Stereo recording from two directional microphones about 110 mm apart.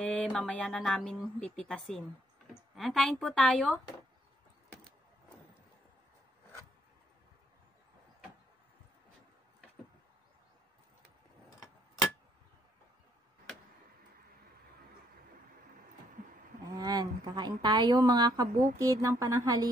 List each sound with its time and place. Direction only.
0.0 s speech: 10° left (ahead or behind)
16.7 s a woman's voice: 40° right (ahead or behind)